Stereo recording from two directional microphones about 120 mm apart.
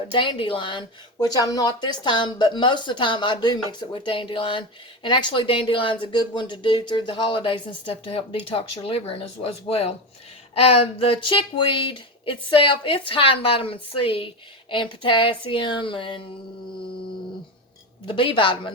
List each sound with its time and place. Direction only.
0.1 s speech: 45° left (ahead or behind)
18.0 s speech: 45° left (ahead or behind)